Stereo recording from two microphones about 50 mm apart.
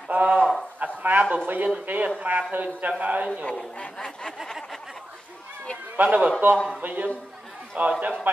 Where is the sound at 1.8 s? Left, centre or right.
Right.